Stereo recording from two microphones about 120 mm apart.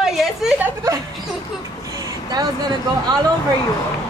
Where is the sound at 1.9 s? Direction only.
35° right (ahead or behind).